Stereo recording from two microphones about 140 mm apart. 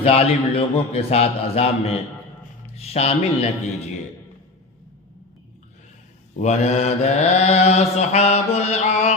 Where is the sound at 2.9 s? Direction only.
50° left (ahead or behind).